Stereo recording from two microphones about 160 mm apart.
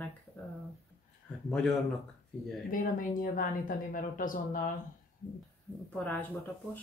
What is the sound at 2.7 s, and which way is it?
A woman's voice, 60° left (ahead or behind).